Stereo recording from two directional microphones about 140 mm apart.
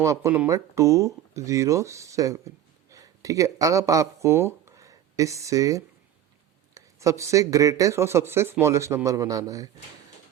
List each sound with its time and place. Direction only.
0.0 s speech: 20° right (ahead or behind)